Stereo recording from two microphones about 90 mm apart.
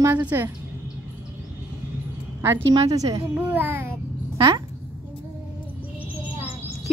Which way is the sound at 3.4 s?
20° right (ahead or behind).